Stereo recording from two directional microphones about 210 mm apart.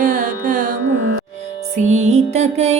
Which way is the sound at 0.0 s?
40° right (ahead or behind).